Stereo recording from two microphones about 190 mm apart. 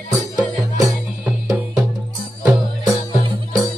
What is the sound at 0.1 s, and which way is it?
Music, 20° right (ahead or behind).